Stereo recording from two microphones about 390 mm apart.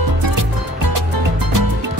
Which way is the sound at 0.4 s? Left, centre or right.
Right.